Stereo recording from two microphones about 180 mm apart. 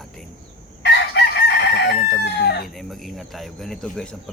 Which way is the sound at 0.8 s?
70° left (ahead or behind).